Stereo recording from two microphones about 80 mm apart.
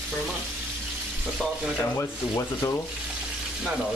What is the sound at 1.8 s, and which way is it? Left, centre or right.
Sanding, left.